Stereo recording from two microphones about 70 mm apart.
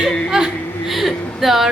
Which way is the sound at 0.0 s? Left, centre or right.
Centre.